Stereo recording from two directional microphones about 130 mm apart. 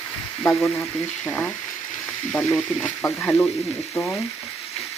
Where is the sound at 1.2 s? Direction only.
10° left (ahead or behind).